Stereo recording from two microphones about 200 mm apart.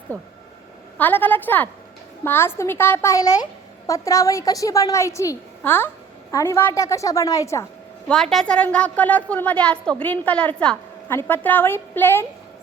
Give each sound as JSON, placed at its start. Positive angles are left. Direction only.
{"t": 0.1, "sound": "a woman's voice", "side_deg": 10}
{"t": 8.0, "sound": "a woman's voice", "side_deg": 0}